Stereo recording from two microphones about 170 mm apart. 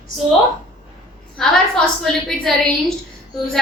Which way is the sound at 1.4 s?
5° left (ahead or behind).